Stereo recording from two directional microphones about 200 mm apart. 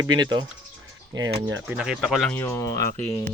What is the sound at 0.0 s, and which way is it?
Speech, 20° right (ahead or behind).